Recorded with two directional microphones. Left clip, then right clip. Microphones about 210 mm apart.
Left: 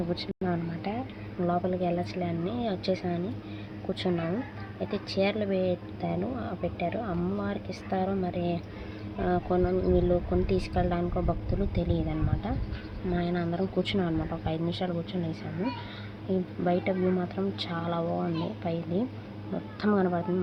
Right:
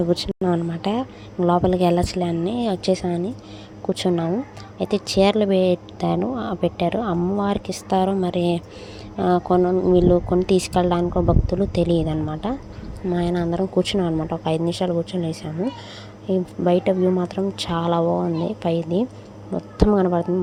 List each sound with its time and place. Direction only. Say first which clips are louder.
0.1 s speech: right 10 dB; 35° right (ahead or behind)